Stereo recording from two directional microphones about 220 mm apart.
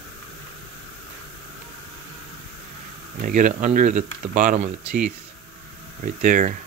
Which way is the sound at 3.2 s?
35° right (ahead or behind).